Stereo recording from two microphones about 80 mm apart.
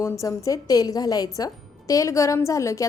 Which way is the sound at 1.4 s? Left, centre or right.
Left.